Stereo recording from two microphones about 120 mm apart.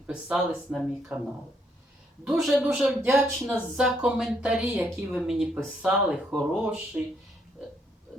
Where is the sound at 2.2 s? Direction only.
Centre (ahead or behind).